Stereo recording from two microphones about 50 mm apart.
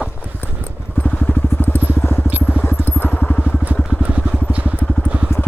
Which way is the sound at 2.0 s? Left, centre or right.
Left.